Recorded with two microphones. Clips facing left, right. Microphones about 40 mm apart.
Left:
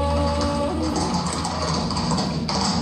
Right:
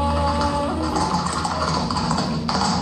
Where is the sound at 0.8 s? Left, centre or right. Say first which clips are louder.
Right 2 dB; right.